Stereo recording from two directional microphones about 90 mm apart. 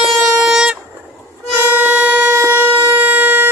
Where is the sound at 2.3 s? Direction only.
30° right (ahead or behind).